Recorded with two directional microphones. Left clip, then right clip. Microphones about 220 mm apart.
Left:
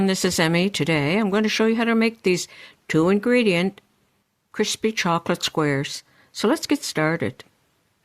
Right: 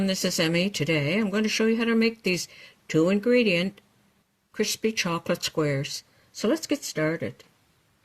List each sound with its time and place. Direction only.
0.0 s speech: 35° left (ahead or behind)